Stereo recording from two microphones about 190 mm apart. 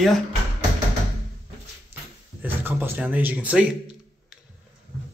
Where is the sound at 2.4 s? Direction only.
10° right (ahead or behind).